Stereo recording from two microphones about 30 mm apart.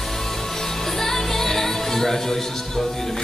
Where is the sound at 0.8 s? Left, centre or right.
Centre.